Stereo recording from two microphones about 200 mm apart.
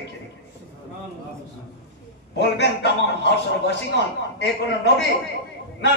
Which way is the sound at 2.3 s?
60° left (ahead or behind).